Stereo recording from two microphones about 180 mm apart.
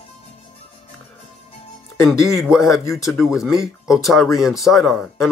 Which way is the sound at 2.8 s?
15° left (ahead or behind).